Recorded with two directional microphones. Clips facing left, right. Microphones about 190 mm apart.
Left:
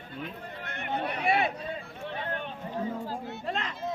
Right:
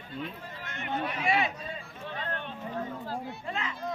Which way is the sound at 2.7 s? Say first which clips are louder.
Left 3 dB; 15° left (ahead or behind).